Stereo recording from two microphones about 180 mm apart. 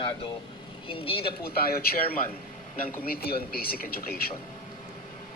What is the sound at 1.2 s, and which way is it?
Speech, 60° left (ahead or behind).